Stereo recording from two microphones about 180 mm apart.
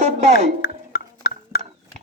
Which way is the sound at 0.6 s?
55° left (ahead or behind).